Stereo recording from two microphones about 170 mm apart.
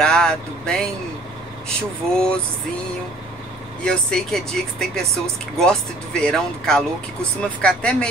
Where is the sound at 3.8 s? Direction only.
Centre (ahead or behind).